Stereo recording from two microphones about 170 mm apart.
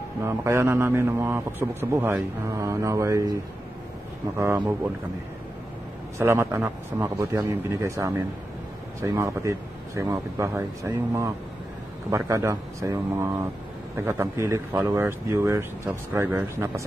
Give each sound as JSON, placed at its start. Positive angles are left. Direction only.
{"t": 0.2, "sound": "a man's voice", "side_deg": -15}
{"t": 4.4, "sound": "a man's voice", "side_deg": -15}
{"t": 6.1, "sound": "a man's voice", "side_deg": -15}